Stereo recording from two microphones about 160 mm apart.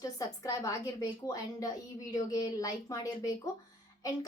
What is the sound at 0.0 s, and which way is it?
A woman's voice, 20° left (ahead or behind).